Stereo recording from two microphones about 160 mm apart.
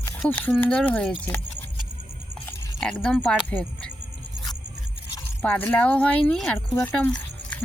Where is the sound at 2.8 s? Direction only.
5° left (ahead or behind).